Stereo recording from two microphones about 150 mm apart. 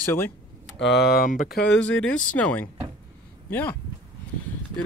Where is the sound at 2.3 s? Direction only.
10° left (ahead or behind).